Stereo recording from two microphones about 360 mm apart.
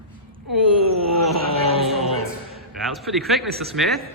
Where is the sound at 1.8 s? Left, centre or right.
Centre.